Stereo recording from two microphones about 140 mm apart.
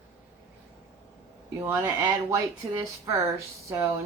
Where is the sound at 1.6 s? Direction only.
20° right (ahead or behind).